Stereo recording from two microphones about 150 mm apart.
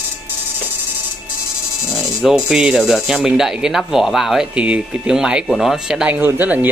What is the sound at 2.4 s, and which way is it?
Speech, 5° right (ahead or behind).